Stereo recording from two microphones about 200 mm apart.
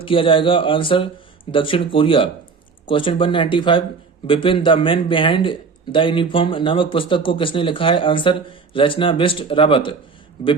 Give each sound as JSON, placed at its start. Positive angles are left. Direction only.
{"t": 0.0, "sound": "speech", "side_deg": 25}